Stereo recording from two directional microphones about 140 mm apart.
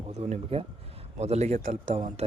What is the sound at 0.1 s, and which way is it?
Speech, 50° right (ahead or behind).